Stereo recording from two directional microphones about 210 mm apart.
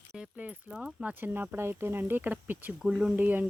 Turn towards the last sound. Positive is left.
turn(degrees=-10)  # may be behind; listen again after turning